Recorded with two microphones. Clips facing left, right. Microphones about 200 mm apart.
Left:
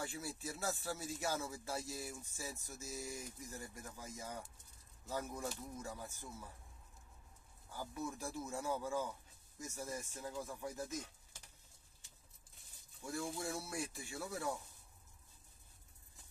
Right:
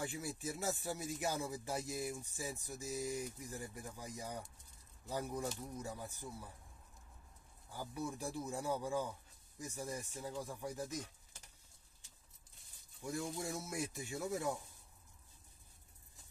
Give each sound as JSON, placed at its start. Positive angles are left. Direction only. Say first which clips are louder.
{"t": 0.0, "sound": "speech", "louder": "right 2 dB", "side_deg": -15}
{"t": 7.7, "sound": "speech", "louder": "right 1 dB", "side_deg": -15}
{"t": 13.4, "sound": "speech", "louder": "right 1 dB", "side_deg": -20}